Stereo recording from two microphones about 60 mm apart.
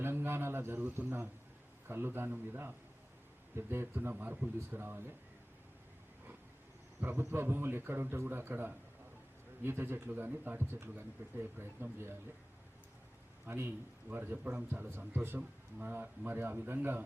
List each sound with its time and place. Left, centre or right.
0.0 s a man's voice: right
4.1 s speech: right
7.0 s speech: right
13.5 s speech: right
14.8 s speech: right